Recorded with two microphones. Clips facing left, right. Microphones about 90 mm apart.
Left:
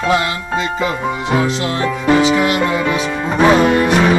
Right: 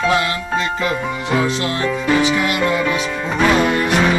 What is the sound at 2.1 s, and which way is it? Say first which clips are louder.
Music: left 5 dB; 30° left (ahead or behind).